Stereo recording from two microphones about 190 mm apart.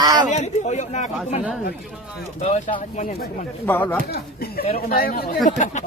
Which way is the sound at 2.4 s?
40° left (ahead or behind).